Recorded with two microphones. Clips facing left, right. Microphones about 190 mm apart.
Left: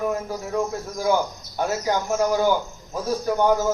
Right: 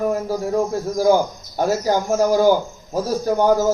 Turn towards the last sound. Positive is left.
turn(degrees=-40)  # may be behind; listen again after turning